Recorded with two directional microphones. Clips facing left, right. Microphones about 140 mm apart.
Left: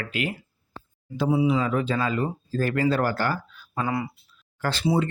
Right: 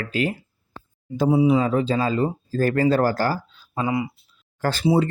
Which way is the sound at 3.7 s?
15° right (ahead or behind).